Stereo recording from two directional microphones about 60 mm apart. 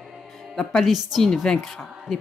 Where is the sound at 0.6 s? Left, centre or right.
Centre.